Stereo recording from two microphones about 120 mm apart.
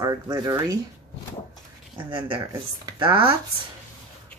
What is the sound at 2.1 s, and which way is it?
Speech, 45° right (ahead or behind).